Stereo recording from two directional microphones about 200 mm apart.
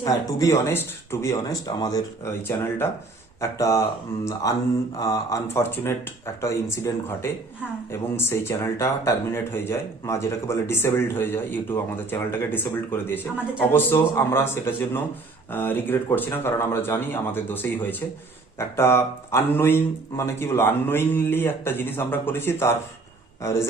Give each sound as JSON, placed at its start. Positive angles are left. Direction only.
{"t": 0.0, "sound": "speech", "side_deg": 15}
{"t": 18.8, "sound": "a man's voice", "side_deg": 15}